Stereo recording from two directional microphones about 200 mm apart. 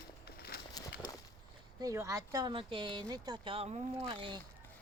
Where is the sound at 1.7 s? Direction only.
15° right (ahead or behind).